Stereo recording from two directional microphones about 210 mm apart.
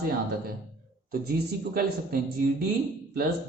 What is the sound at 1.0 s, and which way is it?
Speech, 45° right (ahead or behind).